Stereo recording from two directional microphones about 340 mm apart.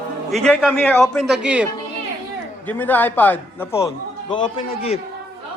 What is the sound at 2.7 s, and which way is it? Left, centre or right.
A man's voice, centre.